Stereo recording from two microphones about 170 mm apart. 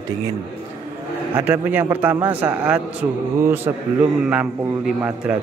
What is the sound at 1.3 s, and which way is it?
A man's voice, 10° right (ahead or behind).